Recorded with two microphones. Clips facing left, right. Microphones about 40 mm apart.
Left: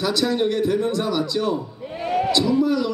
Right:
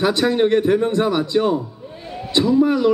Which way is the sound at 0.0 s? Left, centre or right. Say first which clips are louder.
Right 4 dB; right.